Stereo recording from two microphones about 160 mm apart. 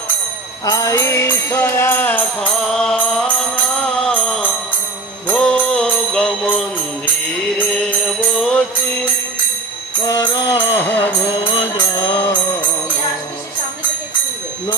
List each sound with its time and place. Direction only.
0.7 s music: 20° left (ahead or behind); by 6.6 s 5° left (ahead or behind)
8.4 s music: 5° left (ahead or behind)
10.0 s music: 25° left (ahead or behind)
10.5 s music: 15° left (ahead or behind)
11.7 s music: 25° left (ahead or behind)